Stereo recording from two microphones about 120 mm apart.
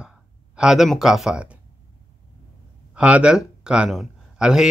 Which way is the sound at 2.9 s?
10° right (ahead or behind).